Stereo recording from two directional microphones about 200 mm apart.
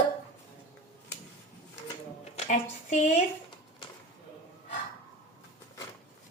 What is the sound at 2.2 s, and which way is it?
Speech, 35° left (ahead or behind).